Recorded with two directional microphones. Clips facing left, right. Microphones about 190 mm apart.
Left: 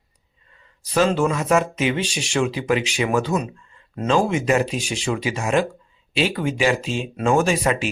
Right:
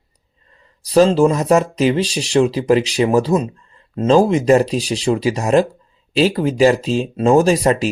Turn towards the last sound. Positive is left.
turn(degrees=-35)  # may be behind; listen again after turning